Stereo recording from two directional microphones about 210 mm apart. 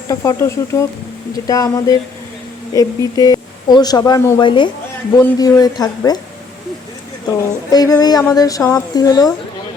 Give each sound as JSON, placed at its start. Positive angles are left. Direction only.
{"t": 0.1, "sound": "a woman's voice", "side_deg": 15}
{"t": 7.7, "sound": "a woman's voice", "side_deg": 20}